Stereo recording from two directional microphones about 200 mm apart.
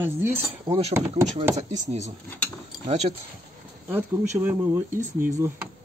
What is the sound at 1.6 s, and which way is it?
Speech, 35° right (ahead or behind).